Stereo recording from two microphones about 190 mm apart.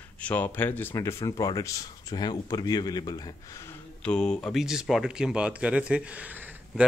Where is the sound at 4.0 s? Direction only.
5° left (ahead or behind).